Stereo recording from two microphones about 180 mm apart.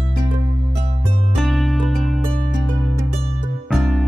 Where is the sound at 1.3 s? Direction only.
Centre (ahead or behind).